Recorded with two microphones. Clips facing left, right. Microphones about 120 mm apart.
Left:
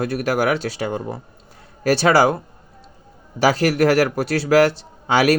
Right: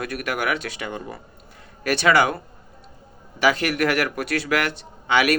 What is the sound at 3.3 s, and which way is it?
A man's voice, 35° left (ahead or behind).